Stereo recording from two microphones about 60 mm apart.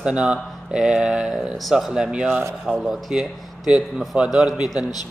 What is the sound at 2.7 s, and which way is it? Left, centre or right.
A man's voice, centre.